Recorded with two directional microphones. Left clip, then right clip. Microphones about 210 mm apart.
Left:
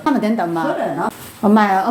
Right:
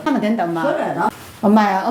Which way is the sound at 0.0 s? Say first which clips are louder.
Left 1 dB; 20° left (ahead or behind).